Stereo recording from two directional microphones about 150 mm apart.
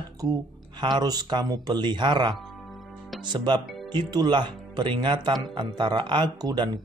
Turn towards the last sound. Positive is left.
turn(degrees=-30)  # may be behind; listen again after turning